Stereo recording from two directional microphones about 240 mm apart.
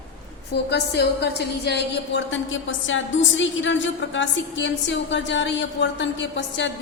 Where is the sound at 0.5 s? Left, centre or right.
Left.